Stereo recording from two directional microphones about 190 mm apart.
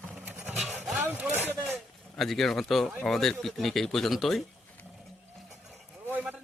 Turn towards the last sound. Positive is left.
turn(degrees=-5)  # may be behind; listen again after turning